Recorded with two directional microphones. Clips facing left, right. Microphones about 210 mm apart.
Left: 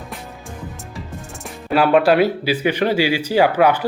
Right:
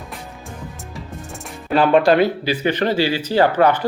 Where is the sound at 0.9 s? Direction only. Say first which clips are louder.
Even; centre (ahead or behind).